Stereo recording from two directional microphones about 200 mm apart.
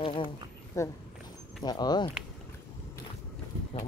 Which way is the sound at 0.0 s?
25° left (ahead or behind).